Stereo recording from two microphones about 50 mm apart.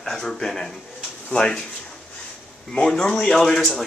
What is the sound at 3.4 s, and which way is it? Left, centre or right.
Speech, centre.